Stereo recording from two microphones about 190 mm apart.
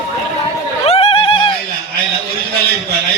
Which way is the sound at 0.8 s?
30° left (ahead or behind).